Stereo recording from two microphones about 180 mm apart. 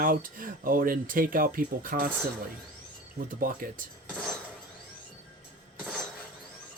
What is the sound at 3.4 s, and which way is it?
Speech, 50° right (ahead or behind).